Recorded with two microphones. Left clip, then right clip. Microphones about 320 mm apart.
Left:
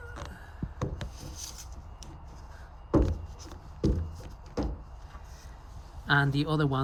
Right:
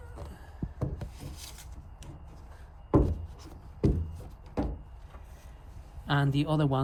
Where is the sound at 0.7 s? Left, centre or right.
Right.